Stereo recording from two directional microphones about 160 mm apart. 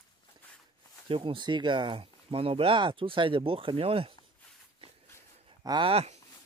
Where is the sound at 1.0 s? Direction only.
30° right (ahead or behind).